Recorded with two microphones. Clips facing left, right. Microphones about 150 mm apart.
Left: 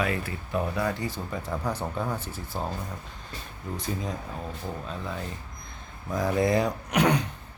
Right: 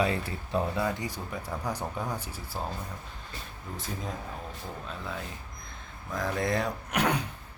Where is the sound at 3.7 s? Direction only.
Centre (ahead or behind).